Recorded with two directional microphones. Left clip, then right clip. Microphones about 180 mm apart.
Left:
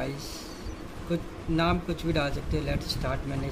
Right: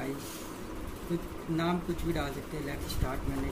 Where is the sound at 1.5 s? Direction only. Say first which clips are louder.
Left 5 dB; 50° left (ahead or behind).